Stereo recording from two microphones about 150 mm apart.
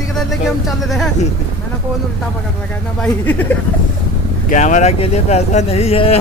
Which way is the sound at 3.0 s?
10° left (ahead or behind).